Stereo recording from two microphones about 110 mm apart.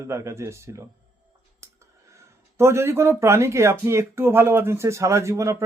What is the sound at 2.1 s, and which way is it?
Speech, 25° right (ahead or behind).